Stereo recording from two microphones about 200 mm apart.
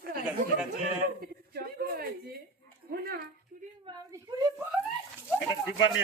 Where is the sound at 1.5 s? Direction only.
50° right (ahead or behind).